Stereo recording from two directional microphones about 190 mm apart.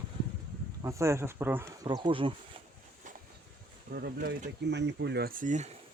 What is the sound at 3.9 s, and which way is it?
Speech, 55° right (ahead or behind).